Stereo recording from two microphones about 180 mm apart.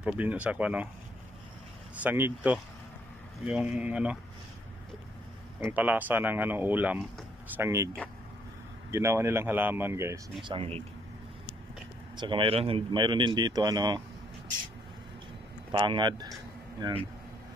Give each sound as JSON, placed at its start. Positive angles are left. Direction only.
{"t": 0.0, "sound": "speech", "side_deg": -5}
{"t": 2.0, "sound": "speech", "side_deg": -10}
{"t": 5.6, "sound": "speech", "side_deg": -10}
{"t": 8.9, "sound": "speech", "side_deg": -15}
{"t": 10.5, "sound": "speech", "side_deg": -30}
{"t": 12.2, "sound": "speech", "side_deg": -25}
{"t": 15.7, "sound": "speech", "side_deg": -25}